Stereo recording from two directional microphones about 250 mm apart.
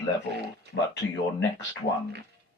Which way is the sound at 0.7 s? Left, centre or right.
Left.